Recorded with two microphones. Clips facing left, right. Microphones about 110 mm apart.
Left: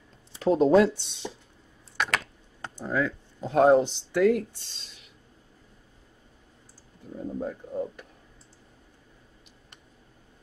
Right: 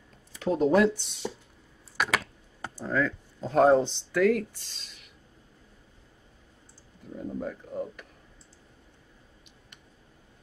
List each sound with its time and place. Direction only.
0.3 s speech: 30° left (ahead or behind)
2.0 s computer keyboard: 5° right (ahead or behind)
2.8 s speech: 15° left (ahead or behind)
7.3 s speech: 25° left (ahead or behind)